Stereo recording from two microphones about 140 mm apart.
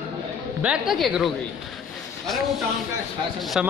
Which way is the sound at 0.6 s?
Centre (ahead or behind).